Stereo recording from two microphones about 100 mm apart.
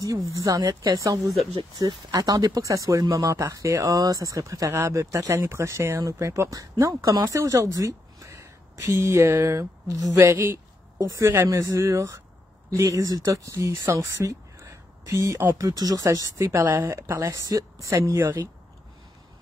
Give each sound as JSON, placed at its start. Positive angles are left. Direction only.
{"t": 0.3, "sound": "speech", "side_deg": -35}
{"t": 1.2, "sound": "speech", "side_deg": 0}
{"t": 1.9, "sound": "speech", "side_deg": -40}
{"t": 17.9, "sound": "speech", "side_deg": -25}